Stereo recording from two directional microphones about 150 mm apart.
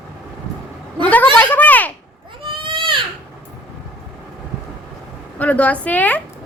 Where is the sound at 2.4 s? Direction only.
35° right (ahead or behind).